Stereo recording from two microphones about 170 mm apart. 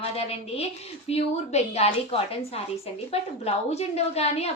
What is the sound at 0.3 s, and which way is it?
A woman's voice, 35° left (ahead or behind).